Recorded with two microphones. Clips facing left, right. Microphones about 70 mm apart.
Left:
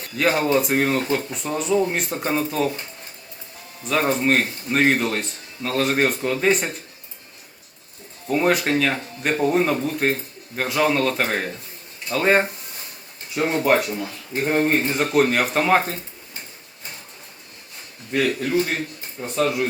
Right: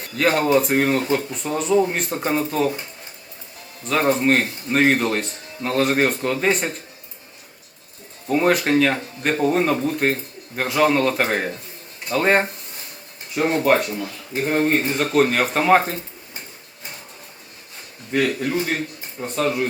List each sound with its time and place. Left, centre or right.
0.2 s speech: centre
3.8 s speech: centre
8.3 s speech: centre
13.6 s a man's voice: centre
18.1 s a man's voice: centre